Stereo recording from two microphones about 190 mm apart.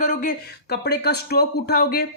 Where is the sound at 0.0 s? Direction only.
40° left (ahead or behind).